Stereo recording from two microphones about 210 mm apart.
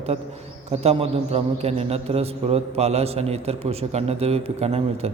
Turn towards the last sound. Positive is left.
turn(degrees=-30)  # may be behind; listen again after turning